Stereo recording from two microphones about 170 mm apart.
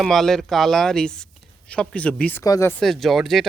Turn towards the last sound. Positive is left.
turn(degrees=0)  # may be behind; listen again after turning